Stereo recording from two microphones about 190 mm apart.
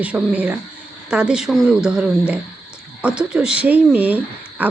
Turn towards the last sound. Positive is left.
turn(degrees=-10)  # may be behind; listen again after turning